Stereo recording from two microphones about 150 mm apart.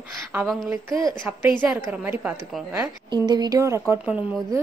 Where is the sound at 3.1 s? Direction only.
30° right (ahead or behind).